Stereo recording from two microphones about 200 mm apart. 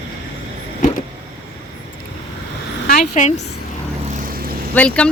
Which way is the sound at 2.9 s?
40° left (ahead or behind).